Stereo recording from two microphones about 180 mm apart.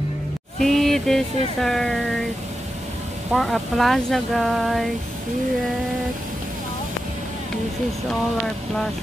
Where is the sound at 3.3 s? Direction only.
Centre (ahead or behind).